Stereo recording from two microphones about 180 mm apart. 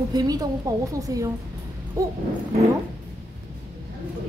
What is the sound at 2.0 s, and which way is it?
Dog, 20° right (ahead or behind).